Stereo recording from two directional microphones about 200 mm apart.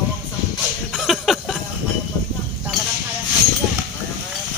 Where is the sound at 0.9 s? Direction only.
Centre (ahead or behind).